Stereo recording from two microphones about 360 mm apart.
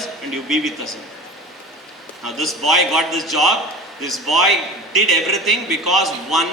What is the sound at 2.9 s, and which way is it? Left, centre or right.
Speech, centre.